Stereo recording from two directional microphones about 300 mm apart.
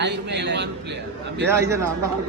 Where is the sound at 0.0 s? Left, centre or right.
Right.